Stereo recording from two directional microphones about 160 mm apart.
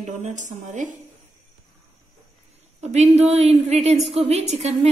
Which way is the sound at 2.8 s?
45° right (ahead or behind).